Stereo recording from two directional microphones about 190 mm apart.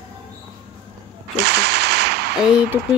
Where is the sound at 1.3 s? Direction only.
60° right (ahead or behind).